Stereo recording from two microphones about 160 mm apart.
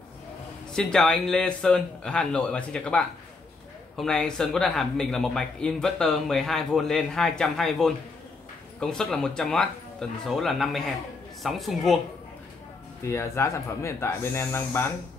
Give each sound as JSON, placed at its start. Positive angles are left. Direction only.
{"t": 0.7, "sound": "a man's voice", "side_deg": 5}
{"t": 13.0, "sound": "speech", "side_deg": 15}